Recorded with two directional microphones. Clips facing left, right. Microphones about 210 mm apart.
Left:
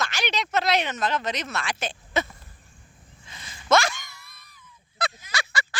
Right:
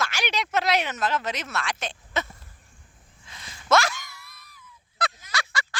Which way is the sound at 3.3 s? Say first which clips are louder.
Left 1 dB; centre (ahead or behind).